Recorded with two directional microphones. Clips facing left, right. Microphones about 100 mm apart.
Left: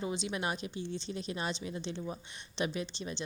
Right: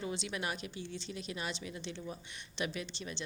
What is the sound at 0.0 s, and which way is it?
A woman's voice, 25° left (ahead or behind).